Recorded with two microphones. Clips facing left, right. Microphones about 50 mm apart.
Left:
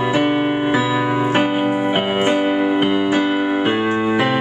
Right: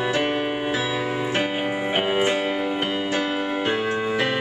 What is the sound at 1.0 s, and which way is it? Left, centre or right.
Music, left.